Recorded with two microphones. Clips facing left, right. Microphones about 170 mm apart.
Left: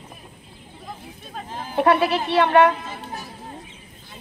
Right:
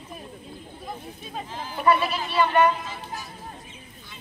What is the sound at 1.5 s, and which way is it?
Speech, 50° left (ahead or behind).